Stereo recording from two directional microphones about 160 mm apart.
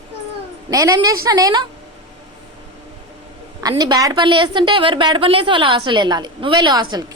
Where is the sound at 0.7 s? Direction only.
20° right (ahead or behind).